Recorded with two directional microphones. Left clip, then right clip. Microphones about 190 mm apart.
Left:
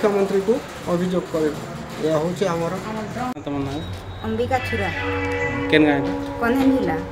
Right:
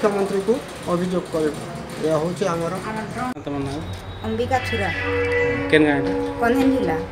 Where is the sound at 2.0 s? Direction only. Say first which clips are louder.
Even; 15° left (ahead or behind).